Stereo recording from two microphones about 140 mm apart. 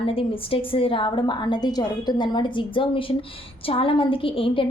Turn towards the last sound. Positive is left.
turn(degrees=40)  # may be behind; listen again after turning